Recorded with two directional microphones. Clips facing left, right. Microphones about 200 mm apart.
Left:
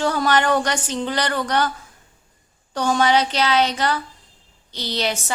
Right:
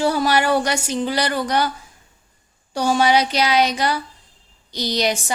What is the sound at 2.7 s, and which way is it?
Speech, 10° right (ahead or behind).